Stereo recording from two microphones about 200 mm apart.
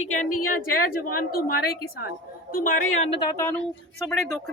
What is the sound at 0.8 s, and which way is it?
Speech, 45° left (ahead or behind).